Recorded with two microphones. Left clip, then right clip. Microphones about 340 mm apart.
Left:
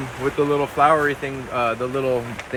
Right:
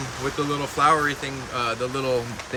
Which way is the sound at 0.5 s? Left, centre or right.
Centre.